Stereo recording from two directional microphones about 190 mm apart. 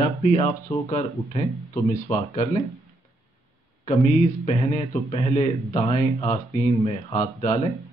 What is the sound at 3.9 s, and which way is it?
Speech, 35° left (ahead or behind).